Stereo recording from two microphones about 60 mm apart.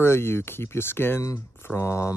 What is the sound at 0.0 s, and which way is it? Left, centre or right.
Speech, left.